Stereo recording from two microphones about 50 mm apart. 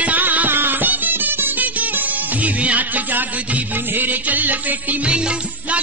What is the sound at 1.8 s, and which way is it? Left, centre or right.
Music, right.